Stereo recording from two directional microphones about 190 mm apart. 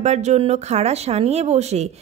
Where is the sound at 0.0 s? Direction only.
35° right (ahead or behind).